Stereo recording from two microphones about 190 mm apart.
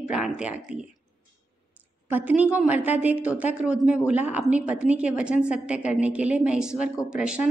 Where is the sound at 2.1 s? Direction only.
10° right (ahead or behind).